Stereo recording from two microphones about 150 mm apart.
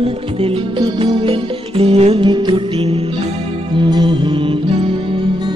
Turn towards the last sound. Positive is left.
turn(degrees=-35)  # may be behind; listen again after turning